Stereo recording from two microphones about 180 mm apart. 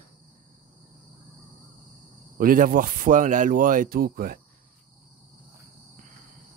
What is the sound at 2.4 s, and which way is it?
Speech, 50° right (ahead or behind).